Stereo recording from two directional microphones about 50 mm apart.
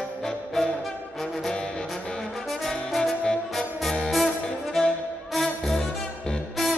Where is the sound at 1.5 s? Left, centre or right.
Centre.